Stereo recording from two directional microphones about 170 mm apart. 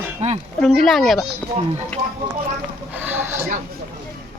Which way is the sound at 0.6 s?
Centre (ahead or behind).